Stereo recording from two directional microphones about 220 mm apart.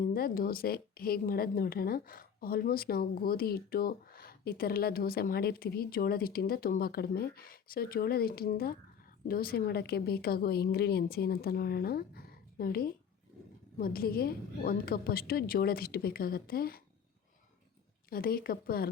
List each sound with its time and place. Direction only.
0.0 s a woman's voice: 40° left (ahead or behind)
18.1 s a woman's voice: 45° left (ahead or behind)